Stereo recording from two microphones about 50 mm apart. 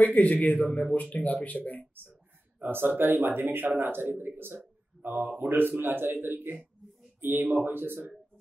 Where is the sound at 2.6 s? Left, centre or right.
Right.